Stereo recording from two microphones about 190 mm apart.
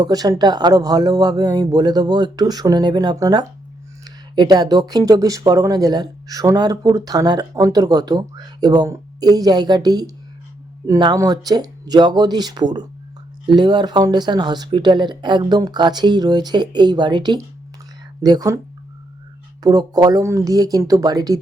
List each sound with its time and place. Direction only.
0.0 s speech: 20° right (ahead or behind)
19.6 s speech: 20° right (ahead or behind)